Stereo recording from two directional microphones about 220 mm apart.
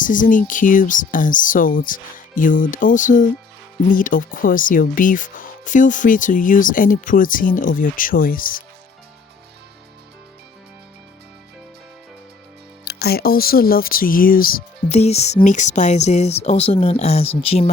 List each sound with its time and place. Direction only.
0.0 s speech: 35° left (ahead or behind)
12.8 s speech: 45° left (ahead or behind); by 17.7 s 25° left (ahead or behind)